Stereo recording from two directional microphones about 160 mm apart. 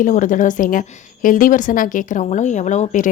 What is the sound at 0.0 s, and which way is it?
A woman's voice, 55° left (ahead or behind).